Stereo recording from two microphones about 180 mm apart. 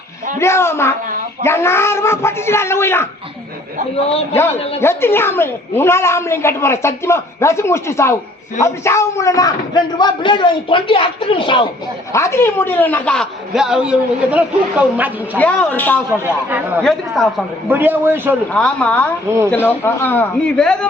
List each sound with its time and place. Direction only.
0.3 s a woman's voice: 15° left (ahead or behind)
4.0 s a man's voice: 35° left (ahead or behind)
4.8 s a woman's voice: 15° left (ahead or behind)
12.1 s a man's voice: 15° left (ahead or behind); by 15.4 s 10° right (ahead or behind)
15.4 s a woman's voice: 10° left (ahead or behind)
17.7 s a man's voice: 10° right (ahead or behind)
18.5 s a man's voice: 5° left (ahead or behind)